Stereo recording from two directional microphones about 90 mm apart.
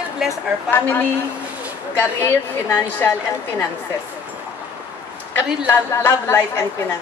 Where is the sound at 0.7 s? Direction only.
25° left (ahead or behind).